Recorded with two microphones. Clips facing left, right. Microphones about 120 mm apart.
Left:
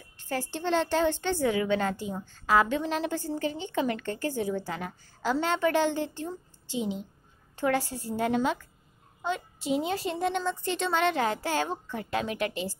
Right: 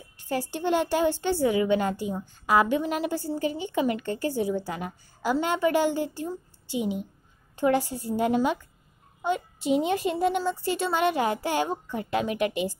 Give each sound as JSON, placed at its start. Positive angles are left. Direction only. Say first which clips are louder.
{"t": 0.2, "sound": "a woman's voice", "louder": "right 3 dB", "side_deg": -15}